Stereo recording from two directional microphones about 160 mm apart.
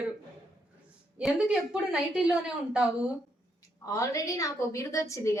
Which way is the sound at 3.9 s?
20° left (ahead or behind).